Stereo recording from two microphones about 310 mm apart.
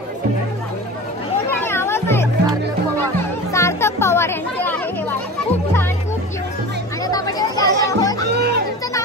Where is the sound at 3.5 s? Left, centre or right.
Centre.